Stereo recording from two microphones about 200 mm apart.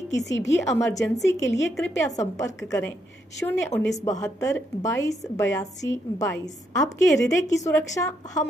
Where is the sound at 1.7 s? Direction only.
15° left (ahead or behind).